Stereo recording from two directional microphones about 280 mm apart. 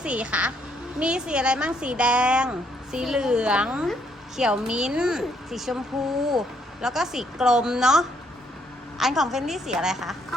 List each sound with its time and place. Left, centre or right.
0.0 s a woman's voice: centre
6.8 s a woman's voice: centre